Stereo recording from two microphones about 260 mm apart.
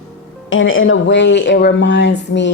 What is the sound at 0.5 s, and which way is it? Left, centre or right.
Speech, left.